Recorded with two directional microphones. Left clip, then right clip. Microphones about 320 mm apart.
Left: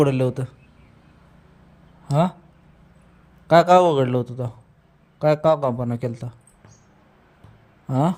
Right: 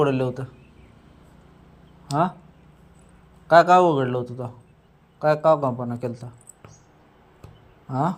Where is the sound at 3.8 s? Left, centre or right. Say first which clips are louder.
Left 2 dB; left.